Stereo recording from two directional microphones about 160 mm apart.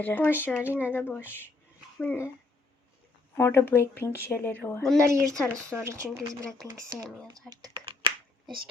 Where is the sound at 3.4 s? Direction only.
15° left (ahead or behind).